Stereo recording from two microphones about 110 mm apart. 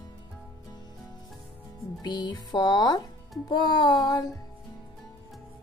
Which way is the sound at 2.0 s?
40° left (ahead or behind).